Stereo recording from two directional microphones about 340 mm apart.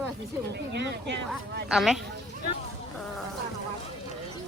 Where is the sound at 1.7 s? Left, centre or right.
Centre.